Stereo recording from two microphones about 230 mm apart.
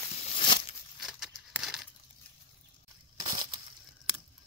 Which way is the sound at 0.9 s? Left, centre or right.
Centre.